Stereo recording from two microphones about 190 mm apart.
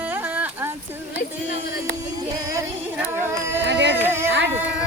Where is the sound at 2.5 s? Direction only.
15° right (ahead or behind).